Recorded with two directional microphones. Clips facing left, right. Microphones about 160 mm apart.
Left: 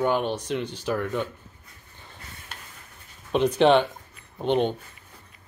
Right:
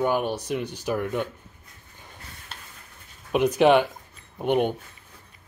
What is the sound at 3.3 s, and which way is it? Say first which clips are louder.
Speech: even; 10° right (ahead or behind).